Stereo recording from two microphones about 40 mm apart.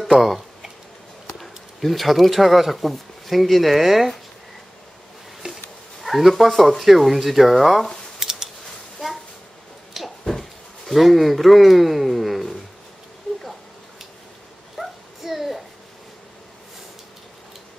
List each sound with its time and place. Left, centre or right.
0.0 s tick-tock: centre
1.2 s speech: centre
5.4 s speech: centre
8.2 s scissors: centre
9.9 s a sound: centre
10.9 s speech: centre
14.8 s a sound: centre